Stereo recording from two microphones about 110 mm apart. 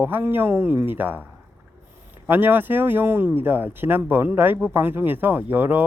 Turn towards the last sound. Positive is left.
turn(degrees=-15)  # may be behind; listen again after turning